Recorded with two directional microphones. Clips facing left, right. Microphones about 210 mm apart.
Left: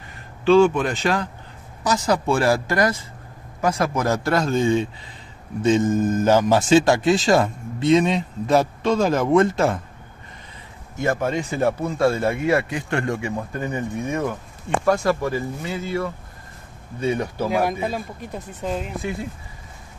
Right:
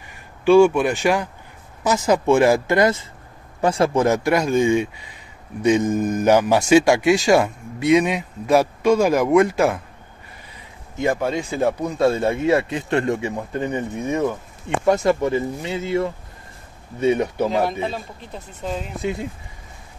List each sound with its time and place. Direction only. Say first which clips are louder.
0.5 s speech: right 2 dB; 15° right (ahead or behind)
11.0 s speech: right 1 dB; 15° right (ahead or behind)
17.5 s speech: even; 10° left (ahead or behind)